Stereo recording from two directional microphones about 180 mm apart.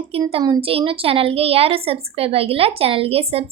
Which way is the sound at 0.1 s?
30° right (ahead or behind).